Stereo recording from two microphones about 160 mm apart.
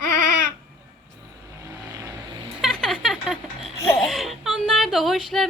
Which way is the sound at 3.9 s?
Centre (ahead or behind).